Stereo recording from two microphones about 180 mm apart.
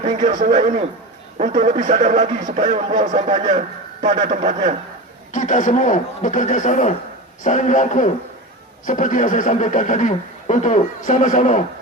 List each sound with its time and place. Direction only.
0.1 s a man's voice: 25° right (ahead or behind)
0.3 s speech: 45° right (ahead or behind)
5.3 s speech: 45° left (ahead or behind)